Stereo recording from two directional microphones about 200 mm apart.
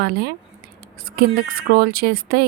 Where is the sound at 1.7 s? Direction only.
50° right (ahead or behind).